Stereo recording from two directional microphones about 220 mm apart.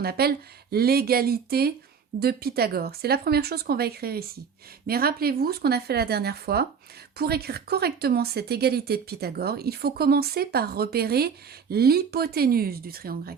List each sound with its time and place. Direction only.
0.0 s speech: 45° right (ahead or behind)